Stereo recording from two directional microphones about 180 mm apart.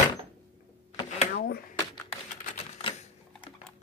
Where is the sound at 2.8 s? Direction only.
40° left (ahead or behind).